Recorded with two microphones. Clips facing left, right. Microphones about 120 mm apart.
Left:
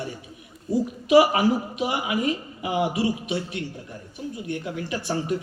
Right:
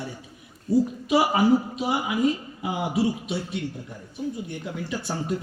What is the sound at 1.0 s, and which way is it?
A woman's voice, 75° left (ahead or behind).